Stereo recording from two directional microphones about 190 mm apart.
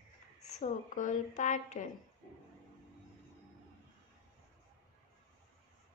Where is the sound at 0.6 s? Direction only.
45° left (ahead or behind).